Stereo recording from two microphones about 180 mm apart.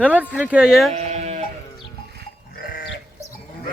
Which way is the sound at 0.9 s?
40° right (ahead or behind).